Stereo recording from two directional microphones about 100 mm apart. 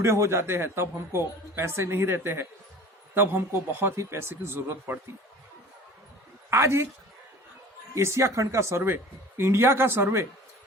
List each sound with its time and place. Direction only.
0.0 s a man's voice: 30° right (ahead or behind)
6.5 s a man's voice: 25° right (ahead or behind)
7.9 s a man's voice: 30° right (ahead or behind)